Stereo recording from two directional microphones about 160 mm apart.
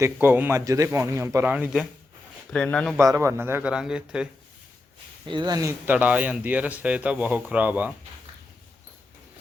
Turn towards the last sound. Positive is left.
turn(degrees=-10)  # may be behind; listen again after turning